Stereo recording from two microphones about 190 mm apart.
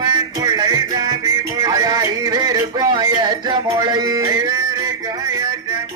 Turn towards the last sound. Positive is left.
turn(degrees=-20)  # may be behind; listen again after turning